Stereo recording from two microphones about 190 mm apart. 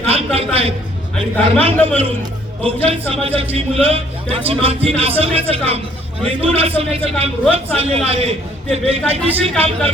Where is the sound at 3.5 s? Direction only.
30° right (ahead or behind).